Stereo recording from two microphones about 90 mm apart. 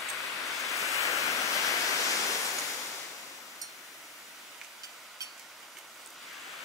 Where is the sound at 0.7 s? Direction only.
35° left (ahead or behind).